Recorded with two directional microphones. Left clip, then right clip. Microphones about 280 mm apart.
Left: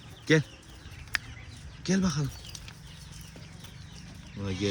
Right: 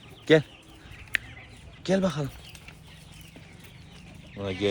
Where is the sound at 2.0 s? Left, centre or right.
Centre.